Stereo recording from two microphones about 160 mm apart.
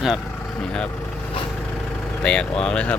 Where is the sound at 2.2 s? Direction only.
5° left (ahead or behind).